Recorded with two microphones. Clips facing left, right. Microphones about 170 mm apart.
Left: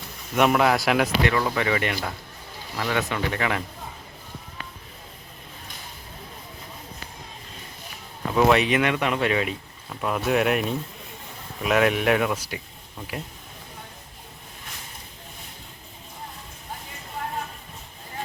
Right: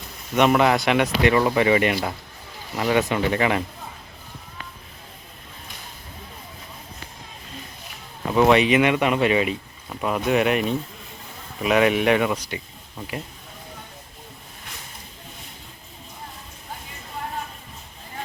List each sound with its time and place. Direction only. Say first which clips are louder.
0.3 s speech: right 2 dB; centre (ahead or behind)
1.3 s speech: right 6 dB; 20° right (ahead or behind)
8.3 s speech: right 3 dB; centre (ahead or behind)